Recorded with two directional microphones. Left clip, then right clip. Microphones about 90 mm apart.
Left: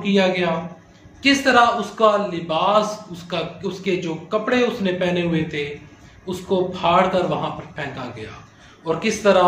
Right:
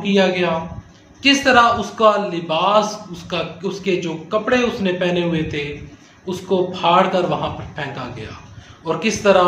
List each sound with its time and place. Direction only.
0.0 s a man's voice: 20° right (ahead or behind)